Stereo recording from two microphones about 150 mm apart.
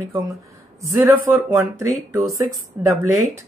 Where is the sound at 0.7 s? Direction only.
20° right (ahead or behind).